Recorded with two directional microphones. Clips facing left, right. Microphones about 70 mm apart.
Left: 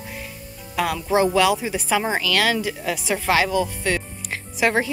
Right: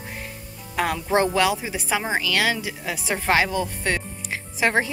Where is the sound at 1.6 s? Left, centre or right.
Centre.